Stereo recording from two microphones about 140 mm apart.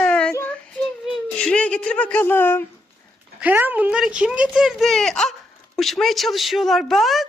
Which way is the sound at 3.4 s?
15° right (ahead or behind).